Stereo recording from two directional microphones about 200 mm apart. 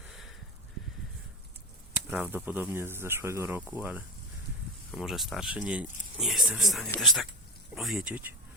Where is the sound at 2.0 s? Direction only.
5° right (ahead or behind).